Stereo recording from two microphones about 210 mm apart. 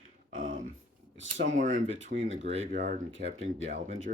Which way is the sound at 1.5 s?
40° right (ahead or behind).